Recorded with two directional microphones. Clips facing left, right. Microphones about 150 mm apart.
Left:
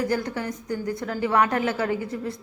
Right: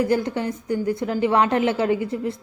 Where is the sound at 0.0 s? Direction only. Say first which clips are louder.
Right 5 dB; 25° right (ahead or behind).